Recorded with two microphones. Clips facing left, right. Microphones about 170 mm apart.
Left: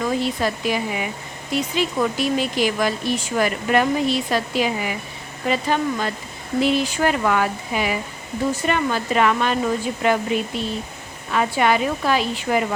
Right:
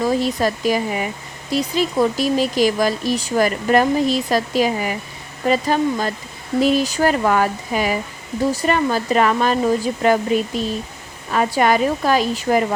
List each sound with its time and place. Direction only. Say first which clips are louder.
0.0 s speech: right 3 dB; 40° right (ahead or behind)